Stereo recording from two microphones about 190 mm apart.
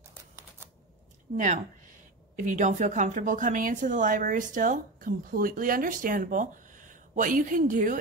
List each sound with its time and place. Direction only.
1.3 s speech: 40° right (ahead or behind)